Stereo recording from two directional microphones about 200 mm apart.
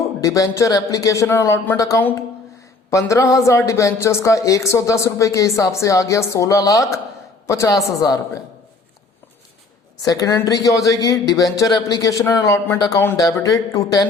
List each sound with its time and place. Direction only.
0.2 s a man's voice: 15° left (ahead or behind)
10.0 s a man's voice: 20° left (ahead or behind)